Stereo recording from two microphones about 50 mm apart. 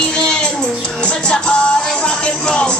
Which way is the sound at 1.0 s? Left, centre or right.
Centre.